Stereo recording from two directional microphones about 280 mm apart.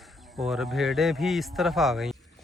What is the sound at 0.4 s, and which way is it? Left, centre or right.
Speech, centre.